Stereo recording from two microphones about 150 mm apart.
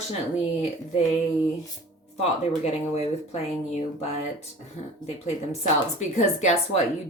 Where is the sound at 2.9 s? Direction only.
45° left (ahead or behind).